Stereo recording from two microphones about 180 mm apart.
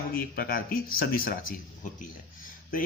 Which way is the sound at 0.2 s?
55° left (ahead or behind).